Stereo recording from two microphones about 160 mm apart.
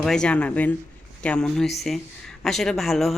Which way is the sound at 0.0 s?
5° left (ahead or behind).